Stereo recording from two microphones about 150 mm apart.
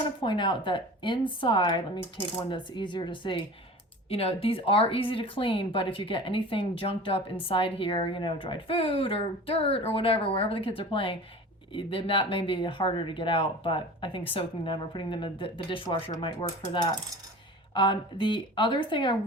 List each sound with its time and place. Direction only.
0.2 s speech: 30° left (ahead or behind)